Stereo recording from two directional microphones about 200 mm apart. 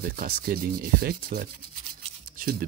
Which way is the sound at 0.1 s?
45° right (ahead or behind).